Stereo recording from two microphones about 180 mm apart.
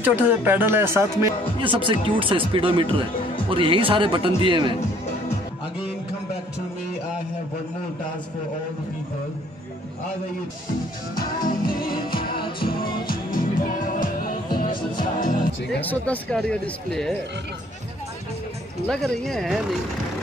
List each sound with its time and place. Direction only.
0.0 s speech: 10° right (ahead or behind)
1.6 s speech: 30° right (ahead or behind)
11.1 s music: 50° left (ahead or behind)
15.8 s speech: 10° left (ahead or behind)
18.9 s speech: centre (ahead or behind)